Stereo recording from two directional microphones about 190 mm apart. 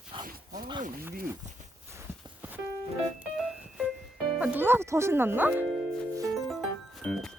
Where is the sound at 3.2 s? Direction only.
5° right (ahead or behind).